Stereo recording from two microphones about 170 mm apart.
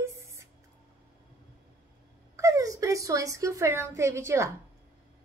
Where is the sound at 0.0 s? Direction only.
15° right (ahead or behind).